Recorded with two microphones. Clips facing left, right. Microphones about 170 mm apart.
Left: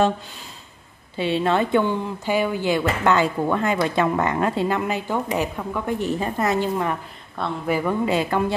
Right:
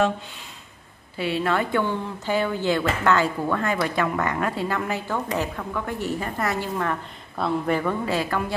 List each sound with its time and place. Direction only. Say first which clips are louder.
1.1 s speech: left 3 dB; 25° left (ahead or behind)
7.3 s speech: right 1 dB; centre (ahead or behind)
8.0 s speech: left 4 dB; 20° left (ahead or behind)